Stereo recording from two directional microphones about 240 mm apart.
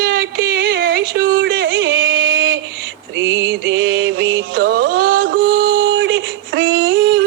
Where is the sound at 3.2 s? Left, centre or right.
Right.